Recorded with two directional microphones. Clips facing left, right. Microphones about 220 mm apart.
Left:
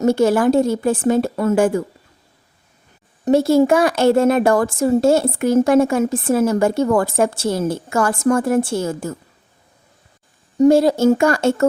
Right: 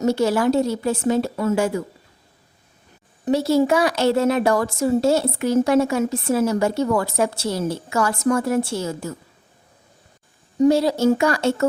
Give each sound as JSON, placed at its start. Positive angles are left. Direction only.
{"t": 0.0, "sound": "speech", "side_deg": 50}
{"t": 3.2, "sound": "speech", "side_deg": 50}
{"t": 10.6, "sound": "speech", "side_deg": 50}